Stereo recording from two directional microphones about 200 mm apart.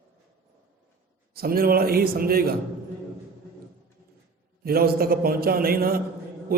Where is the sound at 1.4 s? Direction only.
50° right (ahead or behind).